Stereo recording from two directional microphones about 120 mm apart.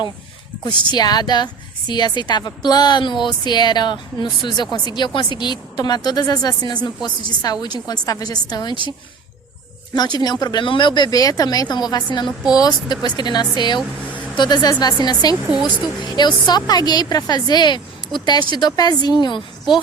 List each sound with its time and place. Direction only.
0.9 s a woman's voice: 35° left (ahead or behind)
9.9 s a woman's voice: 35° left (ahead or behind)
15.6 s a woman's voice: 5° left (ahead or behind)
16.0 s a woman's voice: 35° left (ahead or behind)